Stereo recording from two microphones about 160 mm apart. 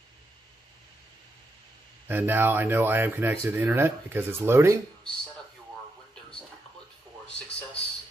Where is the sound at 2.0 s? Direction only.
10° right (ahead or behind).